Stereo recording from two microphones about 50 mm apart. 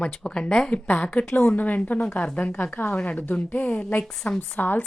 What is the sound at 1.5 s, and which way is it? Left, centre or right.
A woman's voice, left.